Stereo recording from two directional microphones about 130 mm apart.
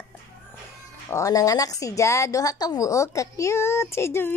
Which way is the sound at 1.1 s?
25° left (ahead or behind).